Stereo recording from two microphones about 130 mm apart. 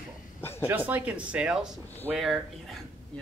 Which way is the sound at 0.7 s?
15° right (ahead or behind).